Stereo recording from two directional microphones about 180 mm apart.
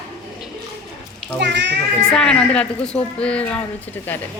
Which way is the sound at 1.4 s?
75° right (ahead or behind).